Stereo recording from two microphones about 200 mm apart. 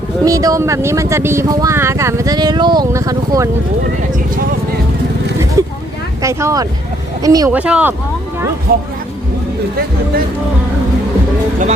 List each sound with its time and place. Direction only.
0.3 s speech: 15° right (ahead or behind)
5.6 s vehicle: 15° right (ahead or behind)
6.2 s speech: 15° right (ahead or behind)
7.6 s speech: 5° right (ahead or behind)
8.7 s speech: 50° right (ahead or behind)